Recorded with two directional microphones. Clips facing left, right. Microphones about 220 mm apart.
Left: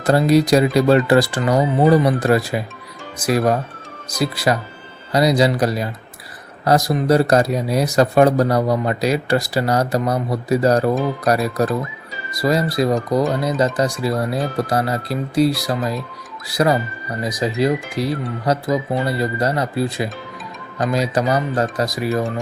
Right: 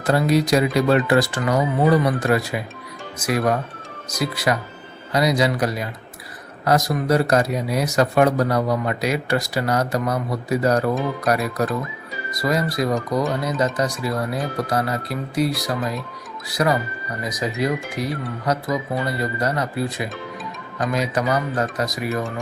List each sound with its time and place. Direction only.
0.0 s speech: 35° left (ahead or behind)